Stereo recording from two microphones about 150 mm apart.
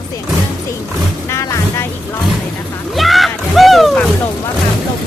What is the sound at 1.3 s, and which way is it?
Music, 20° left (ahead or behind).